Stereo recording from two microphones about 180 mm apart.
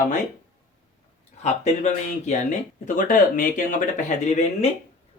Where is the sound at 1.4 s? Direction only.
40° left (ahead or behind).